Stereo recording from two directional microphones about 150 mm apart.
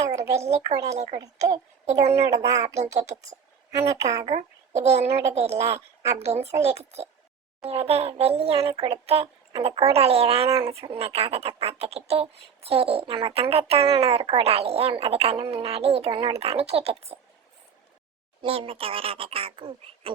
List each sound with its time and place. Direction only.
0.0 s a sound: 20° right (ahead or behind)
0.3 s a child's voice: 45° right (ahead or behind)
0.7 s a woman's voice: 20° right (ahead or behind)
3.8 s a woman's voice: 20° right (ahead or behind)
4.3 s a child's voice: 50° right (ahead or behind)
5.5 s a woman's voice: 20° right (ahead or behind)
6.2 s a child's voice: 45° right (ahead or behind)
18.4 s speech: 40° right (ahead or behind)